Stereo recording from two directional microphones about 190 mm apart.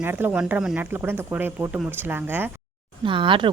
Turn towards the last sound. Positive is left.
turn(degrees=-25)  # may be behind; listen again after turning